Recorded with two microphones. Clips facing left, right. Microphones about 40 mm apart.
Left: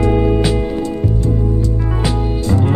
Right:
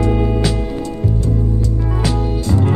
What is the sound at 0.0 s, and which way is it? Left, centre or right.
Music, centre.